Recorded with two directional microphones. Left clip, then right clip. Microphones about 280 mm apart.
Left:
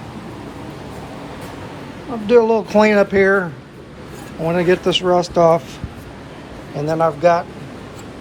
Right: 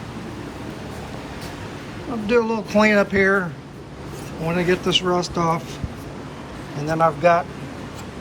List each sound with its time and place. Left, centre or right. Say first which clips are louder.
2.2 s speech: left 7 dB; centre
4.4 s speech: left 5 dB; centre
6.8 s speech: left 2 dB; centre